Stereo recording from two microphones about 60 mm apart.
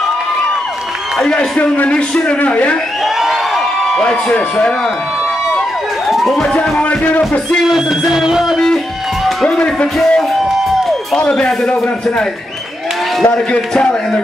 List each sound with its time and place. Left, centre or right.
1.2 s speech: centre
3.9 s a man's voice: centre
6.0 s police car: centre
6.5 s music: centre
7.6 s music: centre
11.1 s a man's voice: centre